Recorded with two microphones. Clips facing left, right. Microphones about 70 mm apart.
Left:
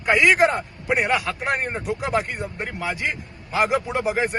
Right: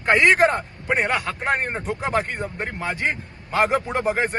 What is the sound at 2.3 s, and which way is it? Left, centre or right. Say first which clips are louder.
Speech: right 1 dB; right.